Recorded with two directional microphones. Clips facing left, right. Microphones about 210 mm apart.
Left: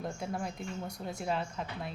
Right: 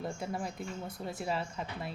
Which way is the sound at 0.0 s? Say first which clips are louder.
Even; centre (ahead or behind).